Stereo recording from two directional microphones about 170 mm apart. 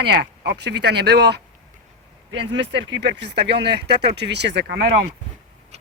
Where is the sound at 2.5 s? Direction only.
90° right.